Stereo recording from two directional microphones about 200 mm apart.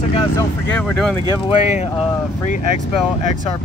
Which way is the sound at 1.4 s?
35° left (ahead or behind).